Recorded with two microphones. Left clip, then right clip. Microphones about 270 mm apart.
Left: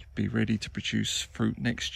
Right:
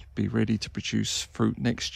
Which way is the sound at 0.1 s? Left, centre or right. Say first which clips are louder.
Right 2 dB; centre.